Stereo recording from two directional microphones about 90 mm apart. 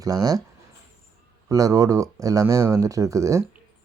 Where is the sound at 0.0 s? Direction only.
45° right (ahead or behind).